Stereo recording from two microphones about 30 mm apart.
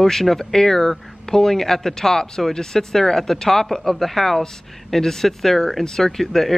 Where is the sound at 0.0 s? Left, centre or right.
Centre.